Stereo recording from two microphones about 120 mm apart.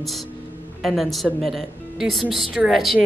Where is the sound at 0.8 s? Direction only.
Centre (ahead or behind).